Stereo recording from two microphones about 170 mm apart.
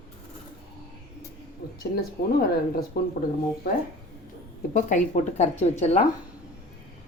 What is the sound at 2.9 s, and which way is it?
Speech, 65° left (ahead or behind).